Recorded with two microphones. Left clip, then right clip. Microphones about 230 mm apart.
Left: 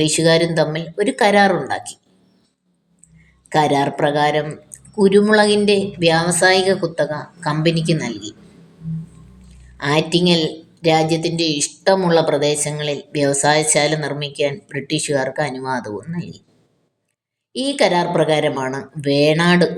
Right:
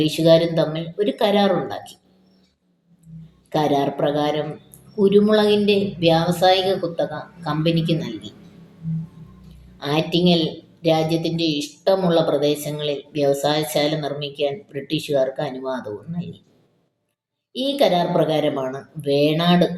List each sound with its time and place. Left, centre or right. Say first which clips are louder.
0.0 s a woman's voice: even; left
3.5 s a woman's voice: left 4 dB; left
9.8 s a woman's voice: left 3 dB; left
17.6 s a woman's voice: left 2 dB; left